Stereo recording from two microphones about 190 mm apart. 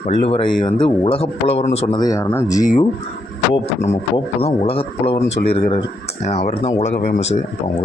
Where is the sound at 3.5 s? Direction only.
35° left (ahead or behind).